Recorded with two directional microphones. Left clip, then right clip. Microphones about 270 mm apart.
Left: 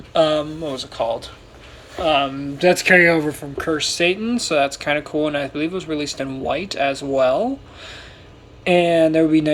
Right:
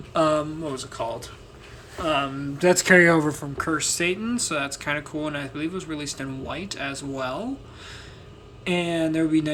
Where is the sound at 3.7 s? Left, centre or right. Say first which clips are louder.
Left 6 dB; centre.